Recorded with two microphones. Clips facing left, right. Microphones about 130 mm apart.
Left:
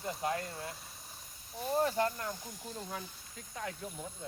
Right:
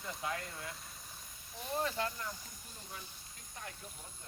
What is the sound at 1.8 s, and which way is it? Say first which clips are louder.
Speech: left 6 dB; 35° left (ahead or behind).